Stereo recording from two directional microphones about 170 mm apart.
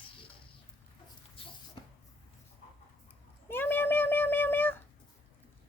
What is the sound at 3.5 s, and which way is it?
Cat, 10° left (ahead or behind).